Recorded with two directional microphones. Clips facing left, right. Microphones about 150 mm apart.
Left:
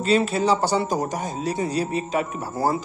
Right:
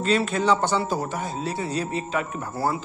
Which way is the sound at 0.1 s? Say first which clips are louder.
Left 2 dB; 35° left (ahead or behind).